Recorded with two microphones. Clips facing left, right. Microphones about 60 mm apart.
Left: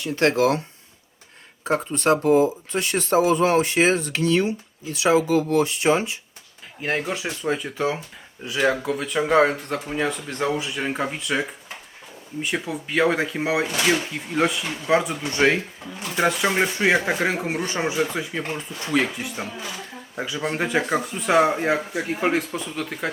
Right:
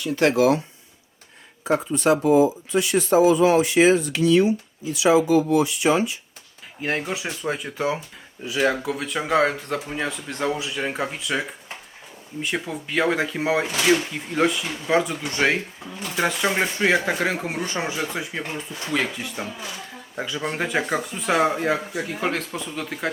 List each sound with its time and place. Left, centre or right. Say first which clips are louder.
0.0 s speech: right 1 dB; left
1.7 s speech: right 1 dB; left
6.8 s speech: left 1 dB; centre
18.9 s speech: left 3 dB; centre
21.7 s speech: left 1 dB; left
22.4 s speech: left 3 dB; centre